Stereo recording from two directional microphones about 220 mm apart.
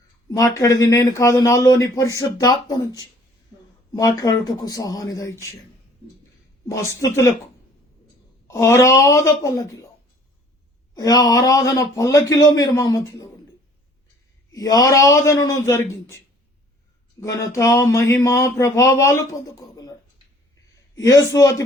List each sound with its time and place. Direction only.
0.3 s speech: 15° left (ahead or behind)
6.7 s speech: 15° left (ahead or behind)
8.4 s speech: 15° left (ahead or behind)
10.9 s speech: 15° left (ahead or behind)
14.5 s speech: 15° left (ahead or behind)